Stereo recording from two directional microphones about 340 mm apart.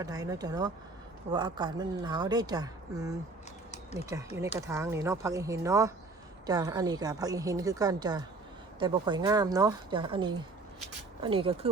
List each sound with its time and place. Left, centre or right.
0.0 s a woman's voice: centre